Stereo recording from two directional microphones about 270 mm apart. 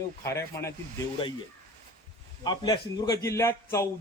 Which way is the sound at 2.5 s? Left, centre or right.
Centre.